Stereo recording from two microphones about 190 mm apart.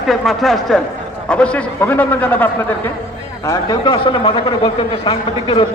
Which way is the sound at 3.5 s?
20° left (ahead or behind).